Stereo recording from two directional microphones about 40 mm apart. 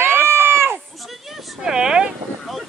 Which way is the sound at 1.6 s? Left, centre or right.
Centre.